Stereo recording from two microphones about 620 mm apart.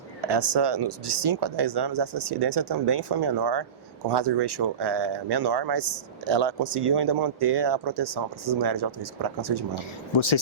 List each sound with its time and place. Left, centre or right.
0.3 s speech: right
9.7 s speech: left